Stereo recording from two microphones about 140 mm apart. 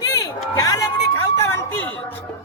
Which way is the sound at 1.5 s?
15° left (ahead or behind).